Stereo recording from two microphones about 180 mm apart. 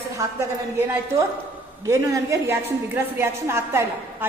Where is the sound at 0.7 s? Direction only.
15° right (ahead or behind).